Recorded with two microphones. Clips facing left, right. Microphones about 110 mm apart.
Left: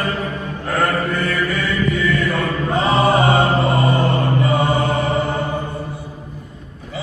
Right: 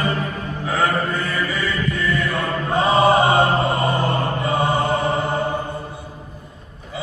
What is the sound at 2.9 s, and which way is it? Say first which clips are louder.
Chant: right 1 dB; 50° right (ahead or behind).